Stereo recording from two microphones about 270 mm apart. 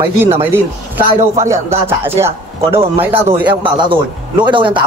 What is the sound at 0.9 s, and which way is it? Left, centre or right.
A man's voice, centre.